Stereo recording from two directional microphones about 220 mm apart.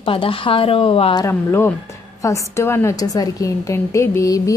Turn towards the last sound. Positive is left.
turn(degrees=15)  # may be behind; listen again after turning